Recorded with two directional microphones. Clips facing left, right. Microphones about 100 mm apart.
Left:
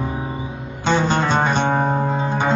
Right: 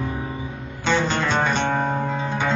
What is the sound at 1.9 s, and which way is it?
Music, 25° left (ahead or behind).